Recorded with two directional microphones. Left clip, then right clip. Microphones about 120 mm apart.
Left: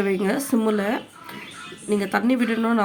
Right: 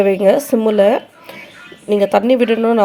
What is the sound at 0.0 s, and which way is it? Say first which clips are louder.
A woman's voice: right 12 dB; 40° right (ahead or behind).